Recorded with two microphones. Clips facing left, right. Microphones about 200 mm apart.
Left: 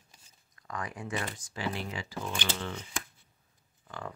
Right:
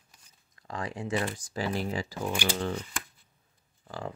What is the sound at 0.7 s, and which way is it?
Speech, 30° right (ahead or behind).